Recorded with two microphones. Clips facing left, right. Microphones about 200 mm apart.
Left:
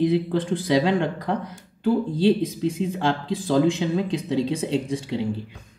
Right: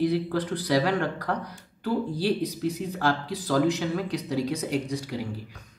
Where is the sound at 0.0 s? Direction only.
20° left (ahead or behind).